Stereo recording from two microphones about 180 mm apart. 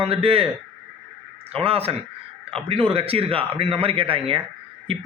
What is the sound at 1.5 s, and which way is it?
A man's voice, 35° right (ahead or behind).